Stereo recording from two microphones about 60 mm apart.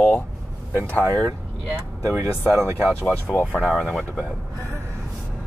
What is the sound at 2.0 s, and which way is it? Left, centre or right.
Speech, right.